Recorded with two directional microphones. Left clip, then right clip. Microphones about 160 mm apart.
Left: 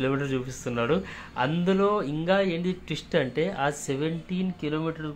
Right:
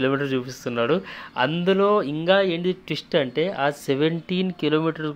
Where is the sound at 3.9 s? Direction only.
45° right (ahead or behind).